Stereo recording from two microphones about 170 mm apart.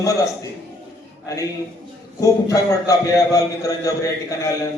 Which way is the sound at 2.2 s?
20° left (ahead or behind).